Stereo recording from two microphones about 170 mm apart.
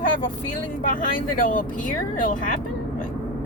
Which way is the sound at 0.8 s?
50° left (ahead or behind).